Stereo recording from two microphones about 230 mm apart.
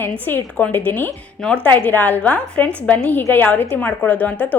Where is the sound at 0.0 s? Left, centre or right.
Centre.